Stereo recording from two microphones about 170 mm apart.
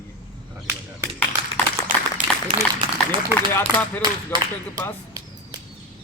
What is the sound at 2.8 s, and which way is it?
Speech, 30° right (ahead or behind).